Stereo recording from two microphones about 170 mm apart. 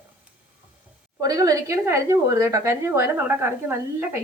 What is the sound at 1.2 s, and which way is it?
A woman's voice, 20° right (ahead or behind).